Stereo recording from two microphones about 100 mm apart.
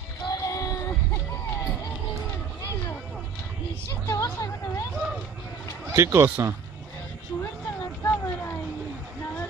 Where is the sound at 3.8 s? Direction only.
25° left (ahead or behind).